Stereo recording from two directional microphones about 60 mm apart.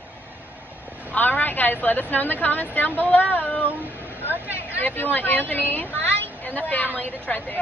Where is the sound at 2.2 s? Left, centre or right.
Left.